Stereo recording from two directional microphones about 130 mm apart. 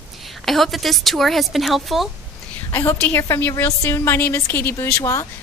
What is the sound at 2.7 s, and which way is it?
A woman's voice, 15° left (ahead or behind).